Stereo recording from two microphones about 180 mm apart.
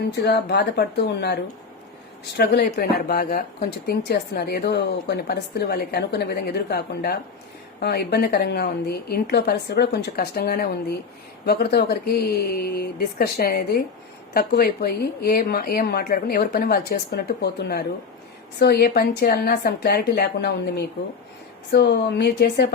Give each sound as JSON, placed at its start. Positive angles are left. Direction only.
{"t": 0.2, "sound": "a woman's voice", "side_deg": 65}